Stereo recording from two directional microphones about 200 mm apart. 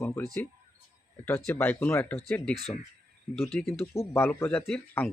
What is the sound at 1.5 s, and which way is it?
Speech, 10° left (ahead or behind).